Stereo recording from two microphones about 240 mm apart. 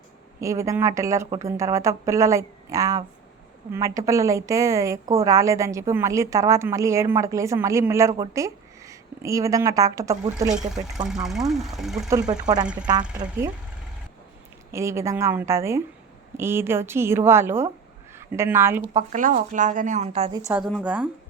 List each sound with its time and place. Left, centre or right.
0.3 s a woman's voice: centre
10.8 s speech: centre
12.3 s a woman's voice: centre
12.6 s speech: centre
13.2 s a woman's voice: centre
14.7 s a woman's voice: centre
19.1 s speech: right
20.7 s speech: centre